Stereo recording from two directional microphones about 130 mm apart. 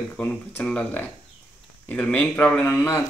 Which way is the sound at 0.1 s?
15° left (ahead or behind).